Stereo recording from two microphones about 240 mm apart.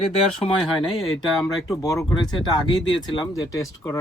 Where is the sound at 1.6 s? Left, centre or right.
Centre.